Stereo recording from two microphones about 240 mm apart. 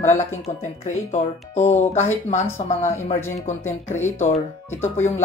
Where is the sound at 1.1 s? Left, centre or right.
Left.